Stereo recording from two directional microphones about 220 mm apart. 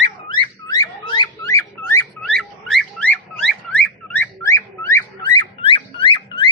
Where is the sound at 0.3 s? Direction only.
20° left (ahead or behind).